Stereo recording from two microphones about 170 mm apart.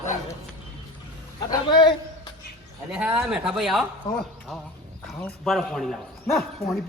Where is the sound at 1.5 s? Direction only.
25° left (ahead or behind).